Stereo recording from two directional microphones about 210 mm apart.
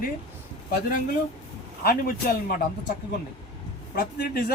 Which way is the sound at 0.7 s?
40° left (ahead or behind).